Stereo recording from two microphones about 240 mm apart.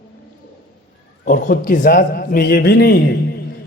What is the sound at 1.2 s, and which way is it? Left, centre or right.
A man's voice, left.